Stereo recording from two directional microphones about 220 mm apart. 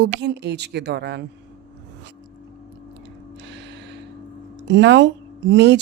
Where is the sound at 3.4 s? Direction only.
50° right (ahead or behind).